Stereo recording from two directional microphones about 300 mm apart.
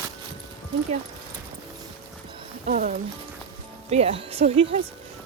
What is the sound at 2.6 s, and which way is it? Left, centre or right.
Speech, right.